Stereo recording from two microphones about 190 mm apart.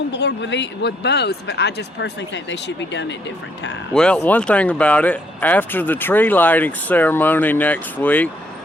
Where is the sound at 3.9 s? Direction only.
5° left (ahead or behind).